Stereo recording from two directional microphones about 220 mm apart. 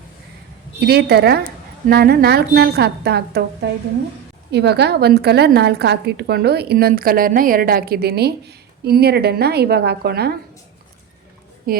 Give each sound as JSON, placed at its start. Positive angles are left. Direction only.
{"t": 0.8, "sound": "a woman's voice", "side_deg": -45}
{"t": 11.7, "sound": "a woman's voice", "side_deg": -40}